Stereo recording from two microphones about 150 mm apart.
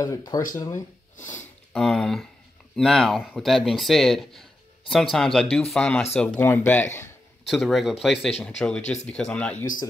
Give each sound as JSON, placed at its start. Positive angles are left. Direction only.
{"t": 0.0, "sound": "speech", "side_deg": 25}
{"t": 1.1, "sound": "speech", "side_deg": 55}
{"t": 1.7, "sound": "speech", "side_deg": 0}
{"t": 7.4, "sound": "speech", "side_deg": 0}